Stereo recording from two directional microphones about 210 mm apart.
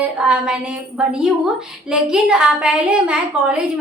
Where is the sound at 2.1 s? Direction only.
5° right (ahead or behind).